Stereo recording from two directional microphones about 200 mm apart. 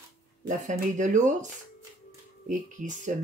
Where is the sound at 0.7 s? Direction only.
40° right (ahead or behind).